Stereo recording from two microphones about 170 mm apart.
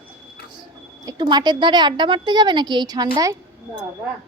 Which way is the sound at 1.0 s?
25° right (ahead or behind).